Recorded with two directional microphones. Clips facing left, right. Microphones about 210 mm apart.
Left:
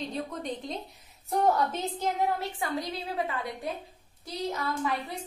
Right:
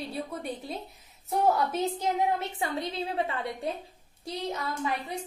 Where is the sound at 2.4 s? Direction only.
25° right (ahead or behind).